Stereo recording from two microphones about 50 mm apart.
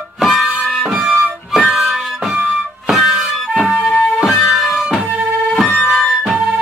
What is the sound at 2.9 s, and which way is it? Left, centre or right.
Music, centre.